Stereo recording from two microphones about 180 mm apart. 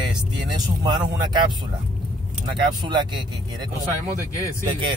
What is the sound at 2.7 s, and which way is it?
Speech, 25° right (ahead or behind).